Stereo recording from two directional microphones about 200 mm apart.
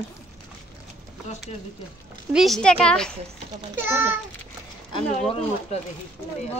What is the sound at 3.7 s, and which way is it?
Speech, 10° right (ahead or behind).